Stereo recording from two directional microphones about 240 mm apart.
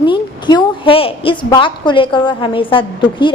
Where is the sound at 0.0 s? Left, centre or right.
Centre.